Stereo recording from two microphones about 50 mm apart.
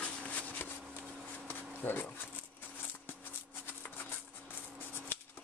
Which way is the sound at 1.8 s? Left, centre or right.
Left.